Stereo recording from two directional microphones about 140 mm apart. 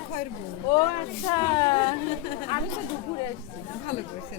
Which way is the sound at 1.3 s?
35° left (ahead or behind).